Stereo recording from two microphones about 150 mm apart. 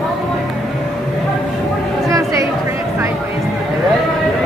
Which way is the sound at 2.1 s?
20° right (ahead or behind).